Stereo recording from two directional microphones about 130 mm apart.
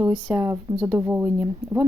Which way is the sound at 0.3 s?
20° right (ahead or behind).